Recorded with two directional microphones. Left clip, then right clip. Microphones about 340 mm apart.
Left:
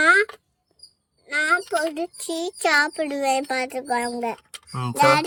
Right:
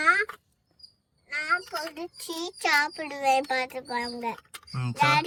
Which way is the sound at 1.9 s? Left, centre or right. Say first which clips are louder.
Left 8 dB; centre.